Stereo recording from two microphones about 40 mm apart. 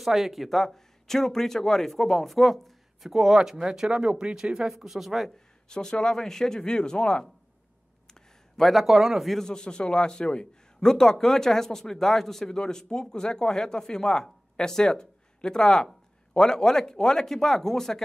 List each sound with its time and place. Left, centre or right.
0.0 s speech: centre
5.7 s speech: centre
8.1 s a sound: centre
8.8 s speech: centre
9.5 s a man's voice: left